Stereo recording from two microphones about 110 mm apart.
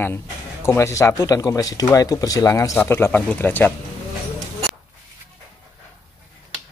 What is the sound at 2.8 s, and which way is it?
Speech, 20° left (ahead or behind).